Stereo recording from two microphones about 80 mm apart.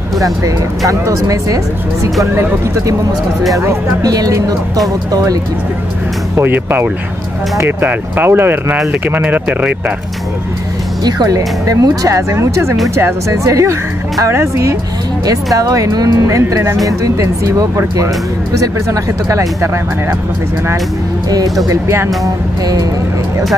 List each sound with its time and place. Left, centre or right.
0.2 s speech: right
4.0 s speech: right
6.3 s speech: right
11.1 s speech: right
15.2 s speech: right
21.6 s speech: right
22.2 s speech: right